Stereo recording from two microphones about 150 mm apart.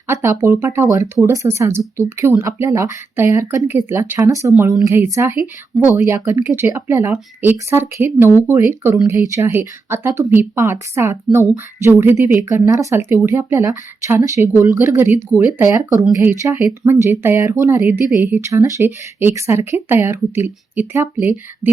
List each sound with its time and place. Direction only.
0.1 s speech: 15° right (ahead or behind)